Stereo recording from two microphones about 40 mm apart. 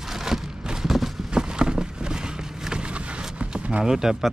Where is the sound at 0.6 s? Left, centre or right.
Centre.